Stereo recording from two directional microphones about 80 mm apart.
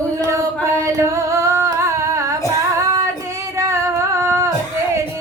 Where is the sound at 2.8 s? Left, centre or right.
Right.